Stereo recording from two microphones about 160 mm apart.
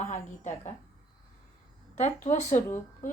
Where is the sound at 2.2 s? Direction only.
45° left (ahead or behind).